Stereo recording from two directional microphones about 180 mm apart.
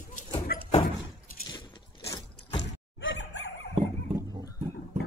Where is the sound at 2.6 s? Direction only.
90° left.